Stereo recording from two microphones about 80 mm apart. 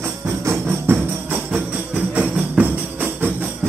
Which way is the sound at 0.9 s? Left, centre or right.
Right.